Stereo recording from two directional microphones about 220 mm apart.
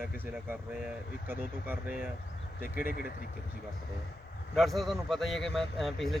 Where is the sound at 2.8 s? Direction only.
45° left (ahead or behind).